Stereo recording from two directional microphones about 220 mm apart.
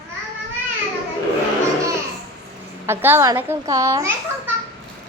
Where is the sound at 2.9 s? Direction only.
10° right (ahead or behind).